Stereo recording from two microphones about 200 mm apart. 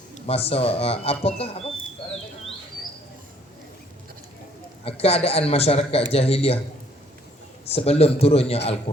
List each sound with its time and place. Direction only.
0.1 s speech: 30° left (ahead or behind)
4.9 s a man's voice: 30° left (ahead or behind)
7.7 s speech: 30° left (ahead or behind)